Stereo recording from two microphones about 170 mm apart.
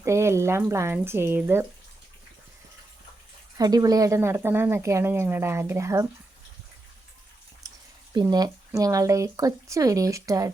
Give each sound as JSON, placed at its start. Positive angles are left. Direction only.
{"t": 0.0, "sound": "a woman's voice", "side_deg": -15}
{"t": 3.6, "sound": "a woman's voice", "side_deg": -20}
{"t": 8.1, "sound": "speech", "side_deg": -25}